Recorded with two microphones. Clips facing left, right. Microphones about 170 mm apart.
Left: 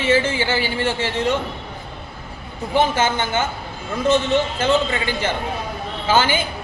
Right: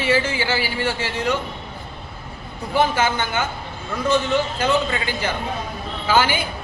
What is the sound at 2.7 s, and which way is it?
Speech, 25° left (ahead or behind).